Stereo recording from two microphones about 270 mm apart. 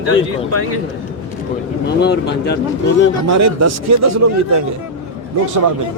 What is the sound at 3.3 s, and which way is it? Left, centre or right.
Speech, right.